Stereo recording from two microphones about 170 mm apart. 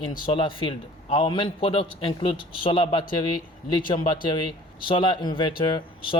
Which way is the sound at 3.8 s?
55° left (ahead or behind).